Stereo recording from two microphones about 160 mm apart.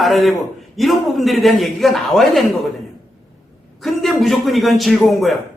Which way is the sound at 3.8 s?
Centre (ahead or behind).